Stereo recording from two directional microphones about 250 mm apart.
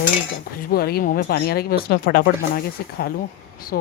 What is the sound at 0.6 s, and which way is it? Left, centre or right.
A woman's voice, left.